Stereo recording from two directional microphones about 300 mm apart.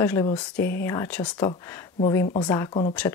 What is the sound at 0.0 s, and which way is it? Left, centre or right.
Speech, centre.